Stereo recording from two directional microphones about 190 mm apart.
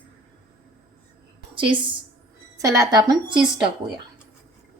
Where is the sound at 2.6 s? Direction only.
15° right (ahead or behind).